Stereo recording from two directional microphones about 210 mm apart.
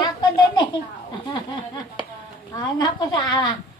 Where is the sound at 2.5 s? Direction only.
20° left (ahead or behind).